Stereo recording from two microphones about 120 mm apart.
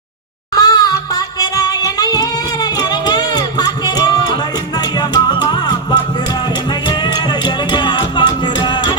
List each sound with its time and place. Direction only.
0.5 s music: 30° left (ahead or behind)
1.4 s singing: 30° left (ahead or behind)
2.9 s music: 35° left (ahead or behind)
7.4 s music: 40° left (ahead or behind)